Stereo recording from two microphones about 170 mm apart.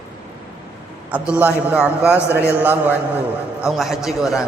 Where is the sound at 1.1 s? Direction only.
10° right (ahead or behind).